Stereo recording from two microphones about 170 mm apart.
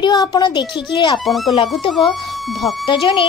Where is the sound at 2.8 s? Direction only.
30° left (ahead or behind).